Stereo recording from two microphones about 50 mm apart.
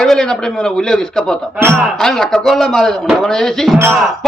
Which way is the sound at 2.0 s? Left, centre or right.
Centre.